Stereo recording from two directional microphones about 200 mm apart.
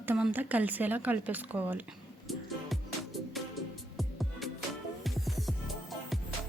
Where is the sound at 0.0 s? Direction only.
10° right (ahead or behind).